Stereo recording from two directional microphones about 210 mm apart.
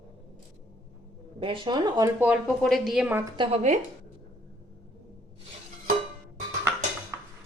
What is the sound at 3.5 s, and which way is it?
Speech, 35° right (ahead or behind).